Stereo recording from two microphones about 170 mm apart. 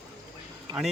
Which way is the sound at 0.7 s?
25° right (ahead or behind).